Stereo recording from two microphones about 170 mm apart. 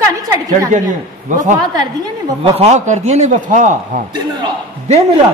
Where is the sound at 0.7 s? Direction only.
50° right (ahead or behind).